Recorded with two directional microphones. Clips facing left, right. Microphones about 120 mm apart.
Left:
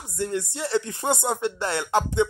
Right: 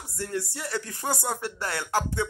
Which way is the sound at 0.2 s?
20° left (ahead or behind).